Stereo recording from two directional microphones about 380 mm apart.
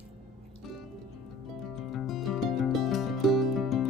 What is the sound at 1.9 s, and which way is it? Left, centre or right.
Music, centre.